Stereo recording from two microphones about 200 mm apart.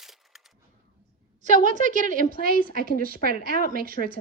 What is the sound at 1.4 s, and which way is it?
A woman's voice, 40° right (ahead or behind).